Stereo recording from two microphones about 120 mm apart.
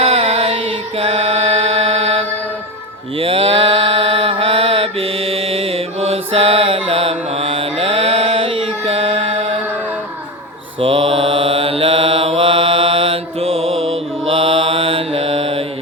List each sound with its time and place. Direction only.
0.0 s music: 55° right (ahead or behind)
3.2 s mantra: 50° right (ahead or behind)
10.8 s mantra: 50° right (ahead or behind)